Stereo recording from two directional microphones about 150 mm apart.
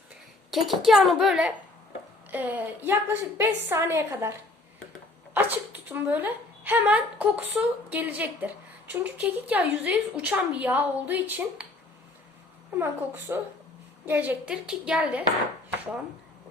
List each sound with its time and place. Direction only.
0.5 s a child's voice: centre (ahead or behind)
12.7 s speech: 15° right (ahead or behind)